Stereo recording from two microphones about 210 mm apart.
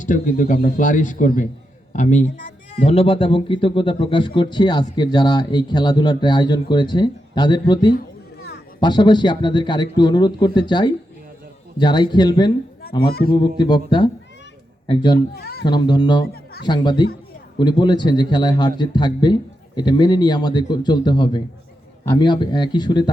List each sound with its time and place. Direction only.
0.0 s a man's voice: 40° left (ahead or behind)
2.7 s speech: 25° left (ahead or behind)
7.9 s a sound: 50° left (ahead or behind)
8.8 s speech: 20° left (ahead or behind)
13.1 s speech: 45° left (ahead or behind)
13.6 s speech: 20° left (ahead or behind)
15.4 s speech: 45° left (ahead or behind)
15.6 s speech: 20° left (ahead or behind)
16.2 s a sound: 45° left (ahead or behind)
16.6 s speech: 20° left (ahead or behind)